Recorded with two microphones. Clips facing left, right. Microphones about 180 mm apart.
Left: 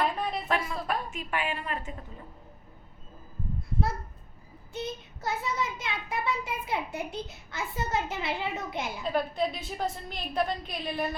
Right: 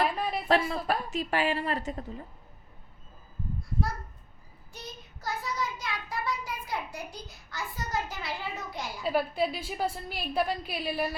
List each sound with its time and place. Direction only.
0.0 s a sound: 5° right (ahead or behind)
0.4 s a woman's voice: 35° right (ahead or behind)
4.7 s a child's voice: 25° left (ahead or behind)
9.0 s a woman's voice: 5° right (ahead or behind)